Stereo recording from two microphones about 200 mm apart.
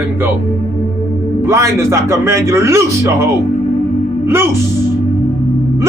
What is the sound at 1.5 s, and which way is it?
A man's voice, 15° right (ahead or behind).